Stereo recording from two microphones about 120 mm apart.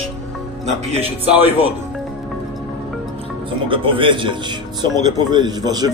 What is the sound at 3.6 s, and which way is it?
A man's voice, 45° right (ahead or behind).